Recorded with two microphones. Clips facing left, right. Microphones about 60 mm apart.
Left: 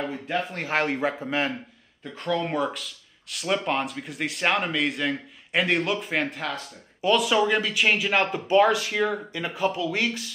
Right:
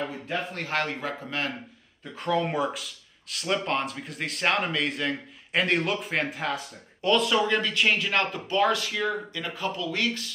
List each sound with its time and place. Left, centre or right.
0.1 s speech: centre
0.7 s speech: centre
2.1 s speech: centre
8.3 s speech: left